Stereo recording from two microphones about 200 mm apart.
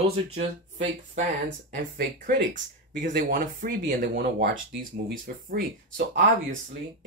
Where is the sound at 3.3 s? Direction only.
45° right (ahead or behind).